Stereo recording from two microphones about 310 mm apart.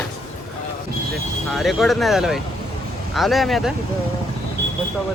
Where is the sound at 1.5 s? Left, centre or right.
Centre.